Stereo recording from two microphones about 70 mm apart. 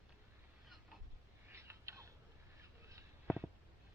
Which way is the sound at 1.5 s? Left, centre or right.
Right.